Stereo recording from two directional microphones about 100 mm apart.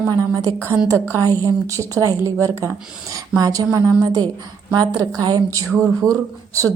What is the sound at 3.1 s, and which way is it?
A woman's voice, 35° right (ahead or behind).